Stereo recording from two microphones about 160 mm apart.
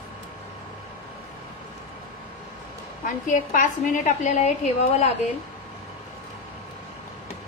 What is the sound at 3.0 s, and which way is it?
A woman's voice, 55° left (ahead or behind).